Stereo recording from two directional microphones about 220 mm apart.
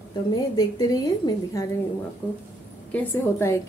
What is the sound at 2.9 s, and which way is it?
Speech, 10° left (ahead or behind).